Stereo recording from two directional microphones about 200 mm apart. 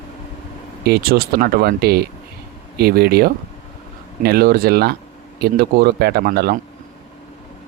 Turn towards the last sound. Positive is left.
turn(degrees=-50)  # may be behind; listen again after turning